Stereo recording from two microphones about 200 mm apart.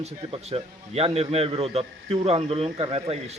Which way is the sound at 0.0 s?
30° right (ahead or behind).